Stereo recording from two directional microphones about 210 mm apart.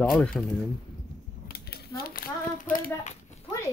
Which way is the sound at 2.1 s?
40° left (ahead or behind).